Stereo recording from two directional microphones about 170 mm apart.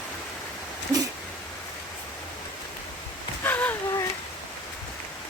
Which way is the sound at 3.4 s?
10° left (ahead or behind).